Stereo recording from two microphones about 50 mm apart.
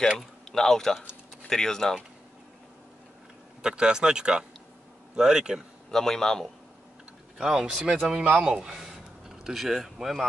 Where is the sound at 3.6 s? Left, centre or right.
Centre.